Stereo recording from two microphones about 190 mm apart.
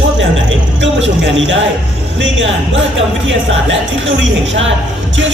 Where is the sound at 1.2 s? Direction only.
75° right (ahead or behind).